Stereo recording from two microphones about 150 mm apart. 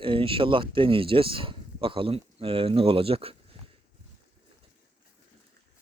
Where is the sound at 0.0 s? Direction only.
35° right (ahead or behind).